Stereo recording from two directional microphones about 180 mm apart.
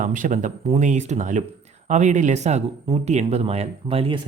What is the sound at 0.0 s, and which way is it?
Speech, 45° right (ahead or behind).